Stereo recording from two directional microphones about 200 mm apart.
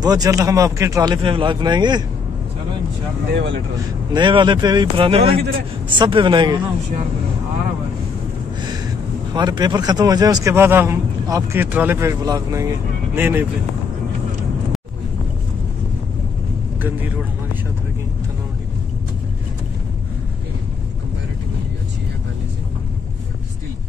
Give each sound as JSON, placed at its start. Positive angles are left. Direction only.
{"t": 0.0, "sound": "speech", "side_deg": -20}
{"t": 3.3, "sound": "speech", "side_deg": -60}
{"t": 4.1, "sound": "speech", "side_deg": -25}
{"t": 9.3, "sound": "a man's voice", "side_deg": -20}